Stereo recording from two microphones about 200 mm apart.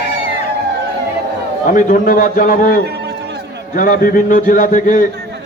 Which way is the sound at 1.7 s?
40° left (ahead or behind).